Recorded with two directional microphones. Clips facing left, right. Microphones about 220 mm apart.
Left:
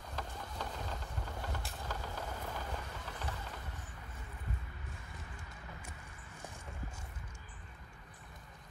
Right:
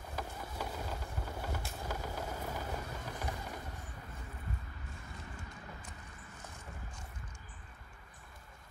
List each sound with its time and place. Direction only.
0.1 s vehicle: 10° right (ahead or behind)